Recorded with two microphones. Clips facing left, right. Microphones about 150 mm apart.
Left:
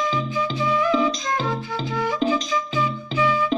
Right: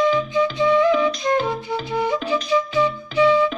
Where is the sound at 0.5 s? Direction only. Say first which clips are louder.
Right 4 dB; 25° right (ahead or behind).